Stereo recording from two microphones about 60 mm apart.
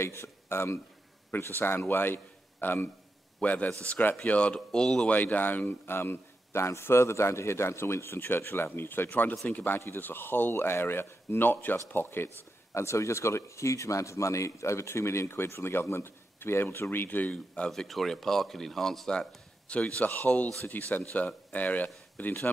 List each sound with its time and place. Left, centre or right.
0.0 s speech: left
1.3 s a man's voice: left
3.4 s speech: left
5.1 s a man's voice: left
12.7 s speech: left
17.6 s speech: centre
19.7 s a man's voice: left